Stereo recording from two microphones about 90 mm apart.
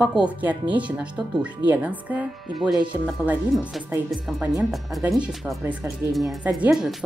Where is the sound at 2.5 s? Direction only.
Centre (ahead or behind).